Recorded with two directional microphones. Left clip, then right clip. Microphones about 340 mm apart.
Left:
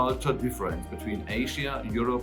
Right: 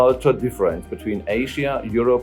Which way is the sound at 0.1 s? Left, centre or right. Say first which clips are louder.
Right 10 dB; centre.